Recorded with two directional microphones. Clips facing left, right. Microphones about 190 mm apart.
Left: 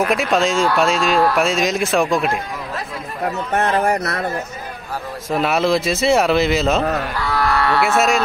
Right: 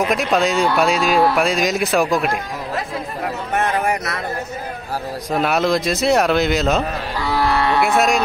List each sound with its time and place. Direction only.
0.1 s speech: centre (ahead or behind)
3.5 s speech: 40° left (ahead or behind)
4.0 s speech: 60° left (ahead or behind)
5.3 s speech: centre (ahead or behind)
7.2 s livestock: 20° right (ahead or behind)